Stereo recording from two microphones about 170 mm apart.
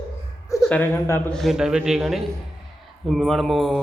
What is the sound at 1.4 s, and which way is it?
A man's voice, centre (ahead or behind).